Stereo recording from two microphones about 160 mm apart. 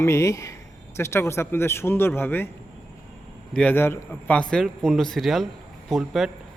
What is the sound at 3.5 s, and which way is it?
A man's voice, 5° left (ahead or behind).